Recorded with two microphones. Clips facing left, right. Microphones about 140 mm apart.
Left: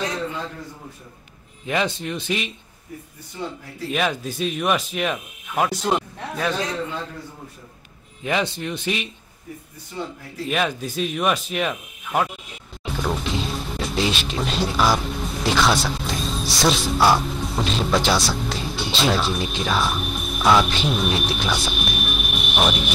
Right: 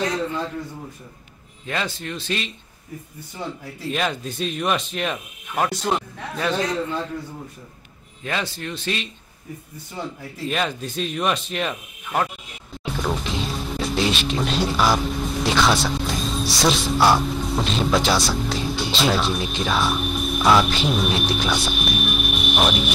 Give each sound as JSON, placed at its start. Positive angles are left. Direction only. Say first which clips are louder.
{"t": 1.7, "sound": "speech", "louder": "left 4 dB", "side_deg": 15}
{"t": 3.9, "sound": "speech", "louder": "left 2 dB", "side_deg": 5}
{"t": 8.2, "sound": "speech", "louder": "left 4 dB", "side_deg": 15}
{"t": 10.5, "sound": "speech", "louder": "left 2 dB", "side_deg": 5}